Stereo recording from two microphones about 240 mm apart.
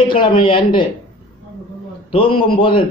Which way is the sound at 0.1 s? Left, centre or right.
Left.